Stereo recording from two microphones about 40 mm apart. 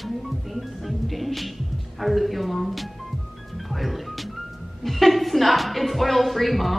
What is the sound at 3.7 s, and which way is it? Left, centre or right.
Music, centre.